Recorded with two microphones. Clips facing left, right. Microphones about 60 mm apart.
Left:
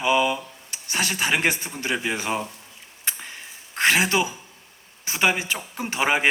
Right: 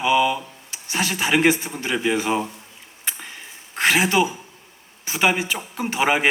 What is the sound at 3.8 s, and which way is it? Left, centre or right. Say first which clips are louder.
Speech: right 2 dB; centre.